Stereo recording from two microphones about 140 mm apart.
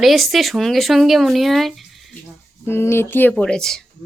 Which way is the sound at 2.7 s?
15° left (ahead or behind).